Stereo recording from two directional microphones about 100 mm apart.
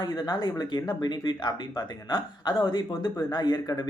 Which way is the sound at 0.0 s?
45° left (ahead or behind).